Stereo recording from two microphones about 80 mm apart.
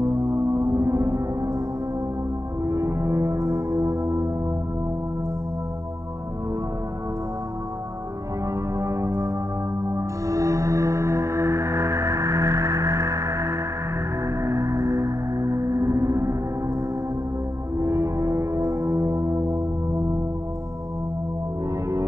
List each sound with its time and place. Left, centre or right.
0.0 s music: right
2.6 s music: right
8.7 s music: right
17.7 s music: right